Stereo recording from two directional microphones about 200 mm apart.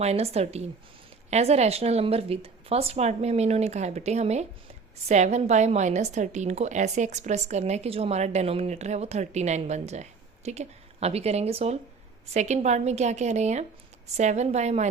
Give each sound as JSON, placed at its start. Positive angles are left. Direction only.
{"t": 0.0, "sound": "a woman's voice", "side_deg": -30}